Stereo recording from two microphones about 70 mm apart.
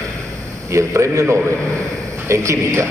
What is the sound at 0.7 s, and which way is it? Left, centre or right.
A man's voice, right.